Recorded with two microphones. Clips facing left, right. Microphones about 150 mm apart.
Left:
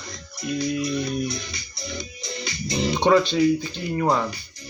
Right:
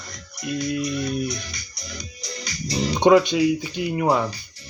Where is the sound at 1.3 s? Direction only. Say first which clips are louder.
Left 1 dB; 25° left (ahead or behind).